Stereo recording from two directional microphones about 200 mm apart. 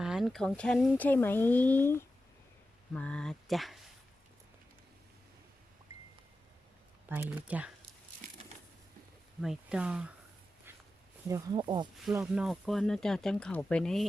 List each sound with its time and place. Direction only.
0.0 s speech: centre (ahead or behind)
7.1 s speech: 10° right (ahead or behind)
9.4 s speech: 5° right (ahead or behind)
11.3 s speech: 20° right (ahead or behind)
12.1 s speech: 5° right (ahead or behind)